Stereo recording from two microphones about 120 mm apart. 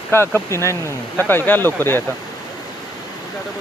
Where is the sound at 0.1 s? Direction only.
20° left (ahead or behind).